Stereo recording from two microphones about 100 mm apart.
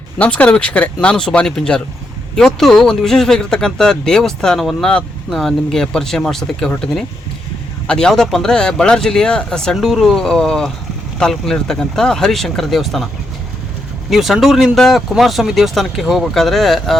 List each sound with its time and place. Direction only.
0.2 s speech: 15° left (ahead or behind)
14.1 s speech: centre (ahead or behind)